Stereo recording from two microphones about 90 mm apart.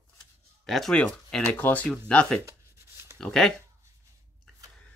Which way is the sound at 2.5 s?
30° right (ahead or behind).